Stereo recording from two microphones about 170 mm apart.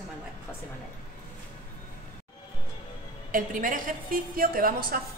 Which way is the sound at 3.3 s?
50° right (ahead or behind).